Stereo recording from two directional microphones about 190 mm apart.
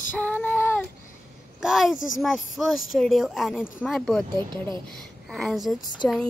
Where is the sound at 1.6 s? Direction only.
Centre (ahead or behind).